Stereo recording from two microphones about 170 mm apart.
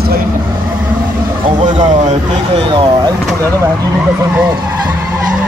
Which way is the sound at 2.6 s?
30° right (ahead or behind).